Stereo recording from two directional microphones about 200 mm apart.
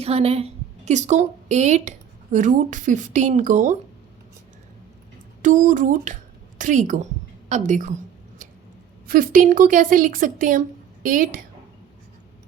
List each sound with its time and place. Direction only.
0.0 s a woman's voice: 30° right (ahead or behind)
5.4 s a woman's voice: 40° right (ahead or behind)
9.0 s a woman's voice: 45° right (ahead or behind)